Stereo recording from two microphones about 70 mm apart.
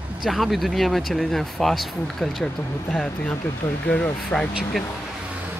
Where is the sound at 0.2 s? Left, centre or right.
Centre.